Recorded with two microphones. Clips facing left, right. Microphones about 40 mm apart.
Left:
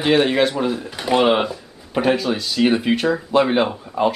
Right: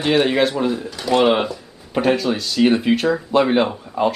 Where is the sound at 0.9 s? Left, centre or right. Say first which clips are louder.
Even; left.